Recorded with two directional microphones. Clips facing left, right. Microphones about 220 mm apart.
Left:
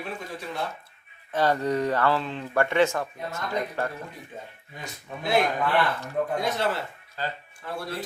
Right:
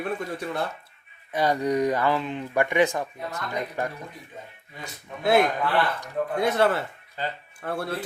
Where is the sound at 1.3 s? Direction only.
10° right (ahead or behind).